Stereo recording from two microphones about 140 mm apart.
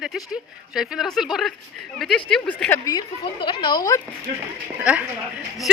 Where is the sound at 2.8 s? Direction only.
30° left (ahead or behind).